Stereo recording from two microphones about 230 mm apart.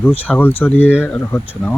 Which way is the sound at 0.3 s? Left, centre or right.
Centre.